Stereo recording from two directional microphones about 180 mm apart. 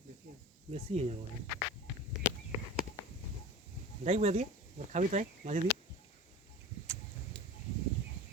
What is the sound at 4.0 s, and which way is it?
Speech, 35° right (ahead or behind).